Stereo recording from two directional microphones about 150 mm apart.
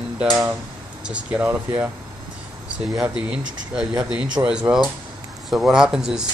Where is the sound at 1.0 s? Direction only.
5° right (ahead or behind).